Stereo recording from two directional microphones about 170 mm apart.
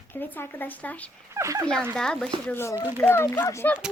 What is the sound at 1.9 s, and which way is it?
Child singing, 5° left (ahead or behind).